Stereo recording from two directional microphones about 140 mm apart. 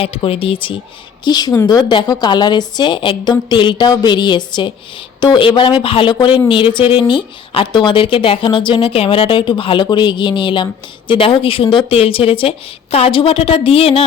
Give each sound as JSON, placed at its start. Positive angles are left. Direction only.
{"t": 0.0, "sound": "a woman's voice", "side_deg": 40}